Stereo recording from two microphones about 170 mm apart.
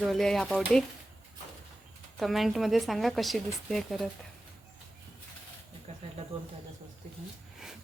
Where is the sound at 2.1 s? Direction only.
Centre (ahead or behind).